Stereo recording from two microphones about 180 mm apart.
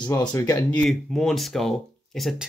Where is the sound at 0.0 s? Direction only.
20° left (ahead or behind).